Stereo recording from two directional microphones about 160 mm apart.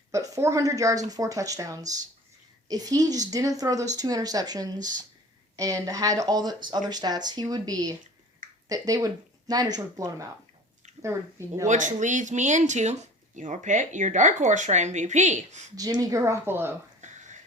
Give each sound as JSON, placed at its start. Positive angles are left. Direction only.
{"t": 0.1, "sound": "speech", "side_deg": -20}
{"t": 11.7, "sound": "speech", "side_deg": -50}
{"t": 15.7, "sound": "speech", "side_deg": -20}
{"t": 17.0, "sound": "a sound", "side_deg": -50}